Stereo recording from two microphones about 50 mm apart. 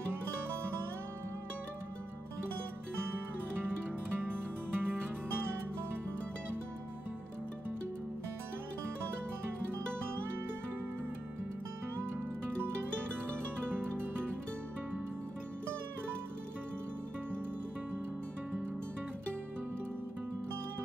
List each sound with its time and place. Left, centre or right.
4.2 s music: right
13.7 s music: right